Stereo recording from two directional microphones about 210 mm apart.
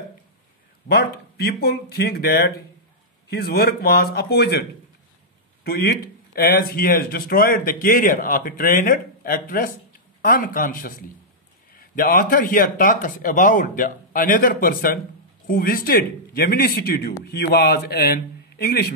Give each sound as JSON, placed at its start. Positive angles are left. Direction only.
{"t": 0.8, "sound": "a man's voice", "side_deg": 50}